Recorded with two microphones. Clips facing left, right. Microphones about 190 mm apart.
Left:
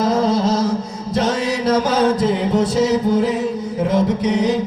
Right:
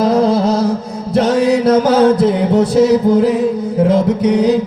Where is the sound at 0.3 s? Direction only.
60° right (ahead or behind).